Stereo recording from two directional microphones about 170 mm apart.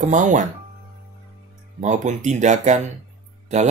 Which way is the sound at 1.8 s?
45° right (ahead or behind).